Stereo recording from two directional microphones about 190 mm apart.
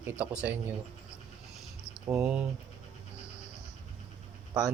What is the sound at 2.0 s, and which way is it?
Speech, 10° right (ahead or behind).